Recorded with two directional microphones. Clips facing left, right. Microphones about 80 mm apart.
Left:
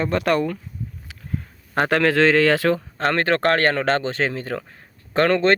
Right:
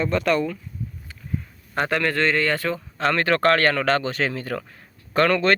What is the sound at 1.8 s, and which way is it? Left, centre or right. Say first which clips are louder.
A man's voice: left 5 dB; left.